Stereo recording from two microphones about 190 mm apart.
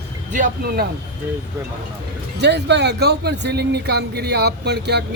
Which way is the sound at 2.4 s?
65° right (ahead or behind).